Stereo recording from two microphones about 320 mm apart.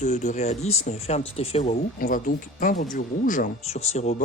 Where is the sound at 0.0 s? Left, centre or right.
Left.